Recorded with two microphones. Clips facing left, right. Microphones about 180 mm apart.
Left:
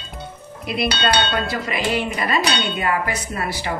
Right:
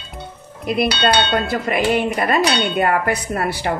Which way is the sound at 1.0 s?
55° right (ahead or behind).